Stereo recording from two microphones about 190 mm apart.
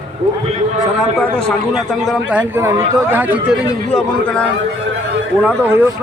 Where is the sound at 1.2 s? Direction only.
5° left (ahead or behind).